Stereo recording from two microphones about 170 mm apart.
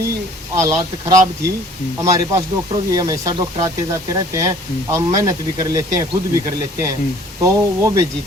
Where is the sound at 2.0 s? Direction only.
20° right (ahead or behind).